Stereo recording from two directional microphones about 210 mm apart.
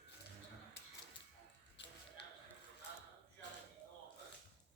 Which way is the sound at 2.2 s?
55° left (ahead or behind).